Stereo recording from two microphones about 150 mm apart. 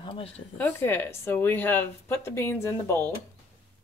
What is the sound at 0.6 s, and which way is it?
Speech, 15° left (ahead or behind).